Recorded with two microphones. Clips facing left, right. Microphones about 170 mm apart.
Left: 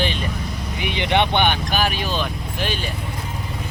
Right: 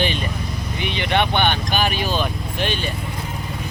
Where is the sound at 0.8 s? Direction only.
15° left (ahead or behind).